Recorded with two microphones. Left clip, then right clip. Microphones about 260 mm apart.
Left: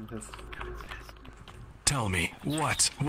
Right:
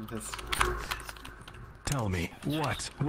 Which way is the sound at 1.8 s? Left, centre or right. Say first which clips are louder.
Left 5 dB; left.